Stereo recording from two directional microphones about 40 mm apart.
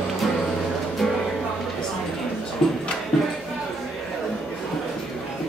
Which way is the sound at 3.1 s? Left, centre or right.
Centre.